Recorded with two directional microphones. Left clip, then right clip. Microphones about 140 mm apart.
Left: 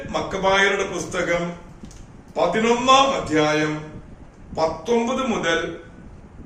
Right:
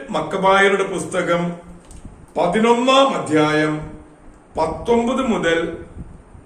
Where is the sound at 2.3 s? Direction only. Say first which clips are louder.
Right 3 dB; 20° right (ahead or behind).